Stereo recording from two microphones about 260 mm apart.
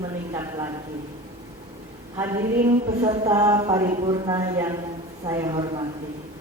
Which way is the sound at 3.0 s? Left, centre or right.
Centre.